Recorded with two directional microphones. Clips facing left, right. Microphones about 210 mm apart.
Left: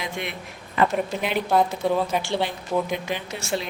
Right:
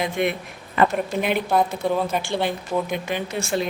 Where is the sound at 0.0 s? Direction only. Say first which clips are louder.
Right 8 dB; 50° right (ahead or behind).